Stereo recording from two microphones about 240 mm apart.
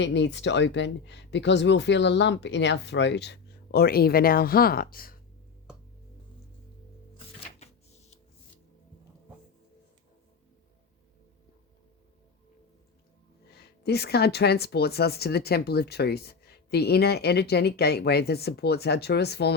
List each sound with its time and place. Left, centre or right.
0.0 s speech: left
13.5 s speech: left